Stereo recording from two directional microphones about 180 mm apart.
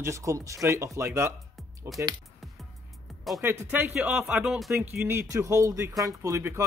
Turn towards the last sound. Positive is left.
turn(degrees=-15)  # may be behind; listen again after turning